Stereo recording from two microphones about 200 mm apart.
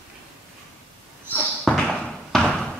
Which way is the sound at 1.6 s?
5° left (ahead or behind).